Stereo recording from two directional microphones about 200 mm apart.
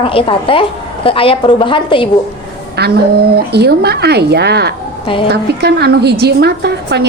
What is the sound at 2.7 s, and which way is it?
A woman's voice, 50° right (ahead or behind).